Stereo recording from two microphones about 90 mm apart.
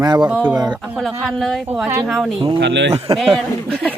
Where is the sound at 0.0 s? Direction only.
50° right (ahead or behind).